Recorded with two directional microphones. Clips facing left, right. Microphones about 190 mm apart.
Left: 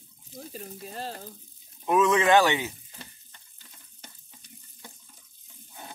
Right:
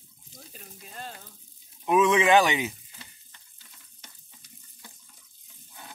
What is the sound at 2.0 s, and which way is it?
Speech, 15° right (ahead or behind).